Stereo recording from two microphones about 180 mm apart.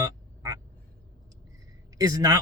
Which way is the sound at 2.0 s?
20° right (ahead or behind).